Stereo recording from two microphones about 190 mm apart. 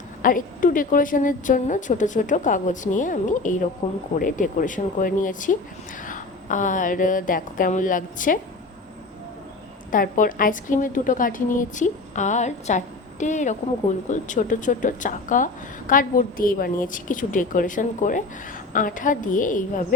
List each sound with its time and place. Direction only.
0.2 s a woman's voice: 45° left (ahead or behind)
3.8 s speech: 30° left (ahead or behind)
4.2 s a woman's voice: 45° left (ahead or behind)
9.9 s a woman's voice: 45° left (ahead or behind)